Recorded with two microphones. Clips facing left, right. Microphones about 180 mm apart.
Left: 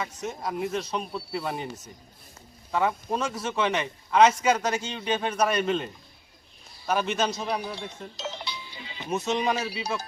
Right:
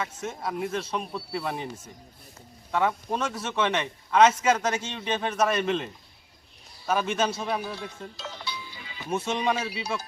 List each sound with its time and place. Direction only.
0.0 s a man's voice: centre (ahead or behind)
6.9 s a man's voice: 5° right (ahead or behind)
7.6 s music: 20° left (ahead or behind)
9.1 s a man's voice: centre (ahead or behind)